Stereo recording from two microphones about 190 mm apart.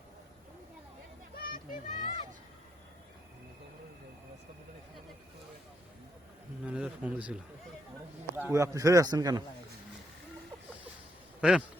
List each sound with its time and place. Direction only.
1.4 s children playing: 50° left (ahead or behind)
6.7 s a sound: 5° right (ahead or behind)
8.4 s a man's voice: 15° right (ahead or behind)
11.3 s speech: centre (ahead or behind)